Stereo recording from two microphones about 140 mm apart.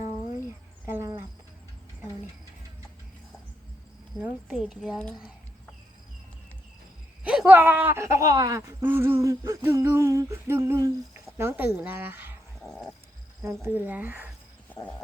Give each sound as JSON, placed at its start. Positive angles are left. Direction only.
{"t": 0.3, "sound": "cricket", "side_deg": -15}
{"t": 4.2, "sound": "a woman's voice", "side_deg": -5}
{"t": 7.3, "sound": "speech", "side_deg": -10}
{"t": 9.6, "sound": "a sound", "side_deg": -15}
{"t": 11.3, "sound": "speech", "side_deg": -15}
{"t": 12.6, "sound": "a sound", "side_deg": 5}
{"t": 13.4, "sound": "speech", "side_deg": -15}